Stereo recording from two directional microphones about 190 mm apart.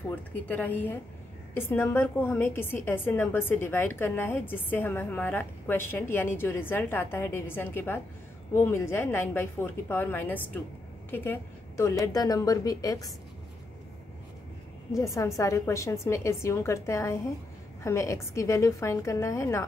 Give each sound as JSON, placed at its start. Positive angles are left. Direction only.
{"t": 0.3, "sound": "a woman's voice", "side_deg": 10}
{"t": 14.9, "sound": "a woman's voice", "side_deg": 15}